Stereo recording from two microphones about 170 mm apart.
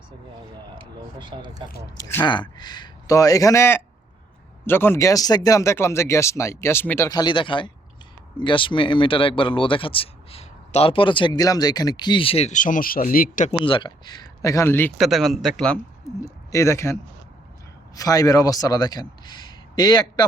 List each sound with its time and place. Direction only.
0.8 s speech: 25° right (ahead or behind)
2.0 s speech: 15° left (ahead or behind)
2.2 s speech: 25° left (ahead or behind)
7.1 s speech: 25° left (ahead or behind); by 13.5 s 55° left (ahead or behind)
13.5 s speech: 30° left (ahead or behind); by 14.9 s 15° left (ahead or behind)
14.9 s speech: centre (ahead or behind)
16.5 s a man's voice: 15° left (ahead or behind)